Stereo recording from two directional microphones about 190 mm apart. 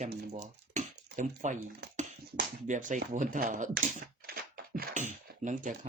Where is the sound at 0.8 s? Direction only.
40° right (ahead or behind).